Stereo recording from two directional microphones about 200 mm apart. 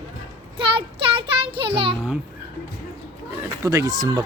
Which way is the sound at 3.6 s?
15° right (ahead or behind).